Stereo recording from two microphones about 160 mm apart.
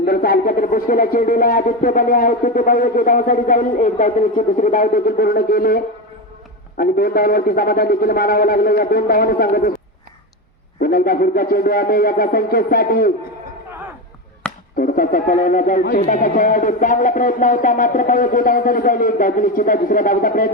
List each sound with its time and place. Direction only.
0.0 s a man's voice: 70° left (ahead or behind)
10.8 s a man's voice: 65° left (ahead or behind)
14.4 s chop: 5° left (ahead or behind)
14.8 s speech: 60° left (ahead or behind)